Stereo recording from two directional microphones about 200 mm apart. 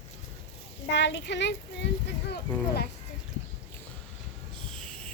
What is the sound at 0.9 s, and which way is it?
Speech, 60° left (ahead or behind).